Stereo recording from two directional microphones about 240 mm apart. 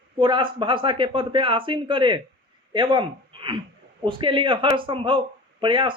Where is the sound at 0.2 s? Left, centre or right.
Centre.